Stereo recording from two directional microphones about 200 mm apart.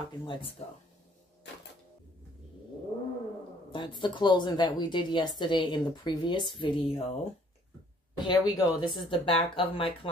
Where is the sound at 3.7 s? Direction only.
25° left (ahead or behind).